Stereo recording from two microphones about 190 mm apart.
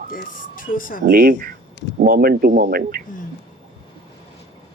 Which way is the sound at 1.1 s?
55° right (ahead or behind).